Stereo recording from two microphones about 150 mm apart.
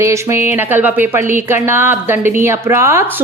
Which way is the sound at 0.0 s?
20° right (ahead or behind).